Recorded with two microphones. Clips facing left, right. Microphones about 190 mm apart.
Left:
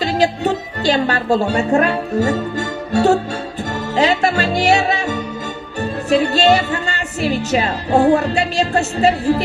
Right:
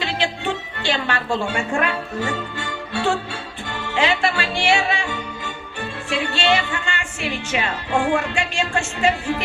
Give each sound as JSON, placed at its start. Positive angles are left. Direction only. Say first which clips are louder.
{"t": 0.0, "sound": "speech", "louder": "left 8 dB", "side_deg": 40}